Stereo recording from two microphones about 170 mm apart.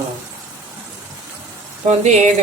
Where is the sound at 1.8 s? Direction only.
45° right (ahead or behind).